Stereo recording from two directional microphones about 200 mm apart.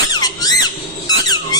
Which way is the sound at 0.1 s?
20° left (ahead or behind).